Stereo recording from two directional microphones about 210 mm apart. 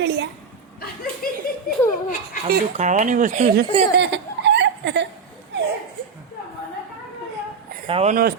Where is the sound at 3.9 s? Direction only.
55° right (ahead or behind).